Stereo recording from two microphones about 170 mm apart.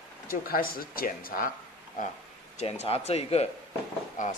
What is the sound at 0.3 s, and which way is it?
Speech, 60° left (ahead or behind).